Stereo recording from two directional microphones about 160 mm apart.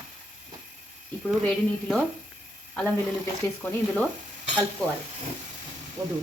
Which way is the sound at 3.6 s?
10° left (ahead or behind).